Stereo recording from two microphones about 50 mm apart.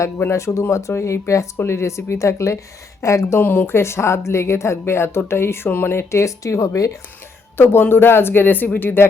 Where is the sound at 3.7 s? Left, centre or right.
Left.